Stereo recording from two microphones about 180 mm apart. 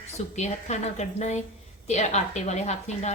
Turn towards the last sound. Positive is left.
turn(degrees=40)  # may be behind; listen again after turning